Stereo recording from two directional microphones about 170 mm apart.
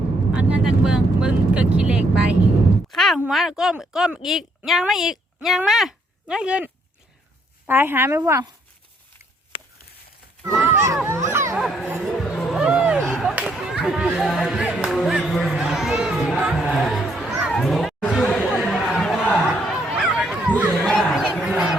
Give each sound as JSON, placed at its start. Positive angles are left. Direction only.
{"t": 0.3, "sound": "speech", "side_deg": -5}
{"t": 7.7, "sound": "speech", "side_deg": -15}
{"t": 9.5, "sound": "a sound", "side_deg": 30}
{"t": 10.7, "sound": "children playing", "side_deg": -15}
{"t": 11.0, "sound": "a sound", "side_deg": -15}
{"t": 11.6, "sound": "a sound", "side_deg": 0}
{"t": 11.9, "sound": "music", "side_deg": 0}
{"t": 17.5, "sound": "chatter", "side_deg": 0}
{"t": 20.7, "sound": "crowd", "side_deg": 5}